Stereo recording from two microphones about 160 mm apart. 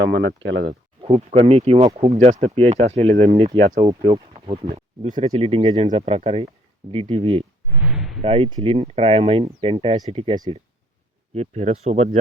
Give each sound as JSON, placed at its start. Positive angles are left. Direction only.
{"t": 0.0, "sound": "speech", "side_deg": -90}
{"t": 1.0, "sound": "speech", "side_deg": -40}
{"t": 4.7, "sound": "speech", "side_deg": -55}
{"t": 5.2, "sound": "speech", "side_deg": -35}
{"t": 7.8, "sound": "a sound", "side_deg": -5}
{"t": 8.2, "sound": "speech", "side_deg": -35}
{"t": 11.3, "sound": "speech", "side_deg": -40}